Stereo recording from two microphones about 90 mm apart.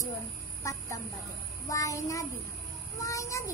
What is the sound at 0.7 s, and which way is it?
Speech, 35° left (ahead or behind).